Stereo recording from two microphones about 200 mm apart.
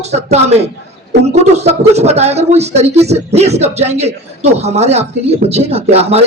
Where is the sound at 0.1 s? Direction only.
30° right (ahead or behind).